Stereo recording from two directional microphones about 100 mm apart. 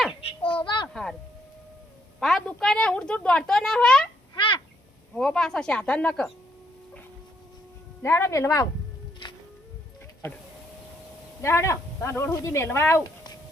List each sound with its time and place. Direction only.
0.2 s a sound: 80° left
2.2 s speech: centre (ahead or behind)
4.4 s bird: 55° left (ahead or behind)
5.1 s speech: 5° left (ahead or behind)
8.0 s speech: 25° left (ahead or behind)
11.4 s speech: 30° left (ahead or behind)